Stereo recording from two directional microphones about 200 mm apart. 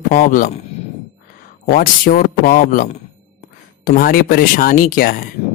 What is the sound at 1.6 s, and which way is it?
Speech, 45° left (ahead or behind).